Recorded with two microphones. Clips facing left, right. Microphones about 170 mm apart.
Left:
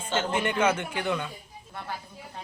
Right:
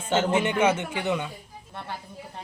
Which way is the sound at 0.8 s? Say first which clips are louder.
Right 2 dB; 20° right (ahead or behind).